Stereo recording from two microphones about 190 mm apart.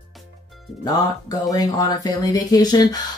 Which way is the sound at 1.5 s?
20° left (ahead or behind).